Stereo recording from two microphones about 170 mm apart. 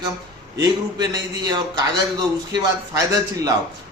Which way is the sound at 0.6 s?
25° right (ahead or behind).